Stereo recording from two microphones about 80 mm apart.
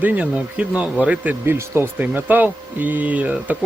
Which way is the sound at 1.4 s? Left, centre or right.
Right.